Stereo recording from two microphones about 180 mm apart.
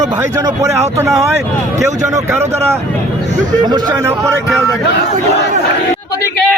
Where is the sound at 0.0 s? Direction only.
20° right (ahead or behind).